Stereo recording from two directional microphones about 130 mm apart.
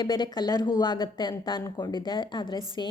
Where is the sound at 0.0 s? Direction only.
35° left (ahead or behind).